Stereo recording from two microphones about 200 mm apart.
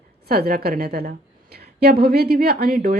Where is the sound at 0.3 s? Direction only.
50° right (ahead or behind).